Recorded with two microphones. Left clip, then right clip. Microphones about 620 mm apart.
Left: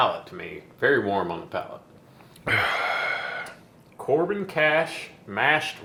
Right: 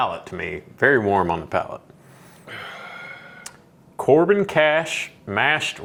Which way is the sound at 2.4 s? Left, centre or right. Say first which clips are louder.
Left 12 dB; left.